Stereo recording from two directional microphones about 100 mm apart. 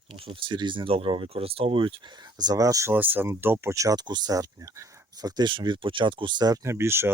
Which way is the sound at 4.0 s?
45° right (ahead or behind).